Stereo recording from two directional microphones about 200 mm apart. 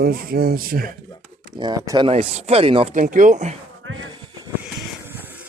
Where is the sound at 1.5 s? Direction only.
20° right (ahead or behind).